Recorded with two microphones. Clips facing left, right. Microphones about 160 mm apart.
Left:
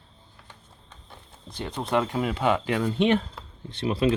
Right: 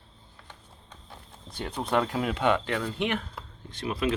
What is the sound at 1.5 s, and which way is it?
Speech, centre (ahead or behind).